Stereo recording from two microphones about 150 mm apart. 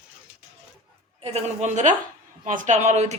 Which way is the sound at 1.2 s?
45° right (ahead or behind).